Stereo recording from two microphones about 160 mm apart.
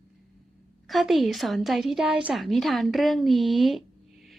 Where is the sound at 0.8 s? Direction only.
Centre (ahead or behind).